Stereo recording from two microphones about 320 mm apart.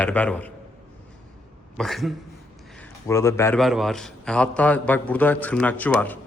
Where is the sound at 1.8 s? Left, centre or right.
Centre.